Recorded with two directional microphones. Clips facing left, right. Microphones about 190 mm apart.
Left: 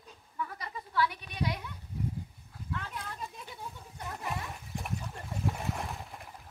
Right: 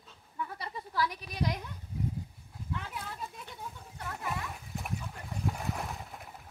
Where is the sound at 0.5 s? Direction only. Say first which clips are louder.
Left 2 dB; 35° right (ahead or behind).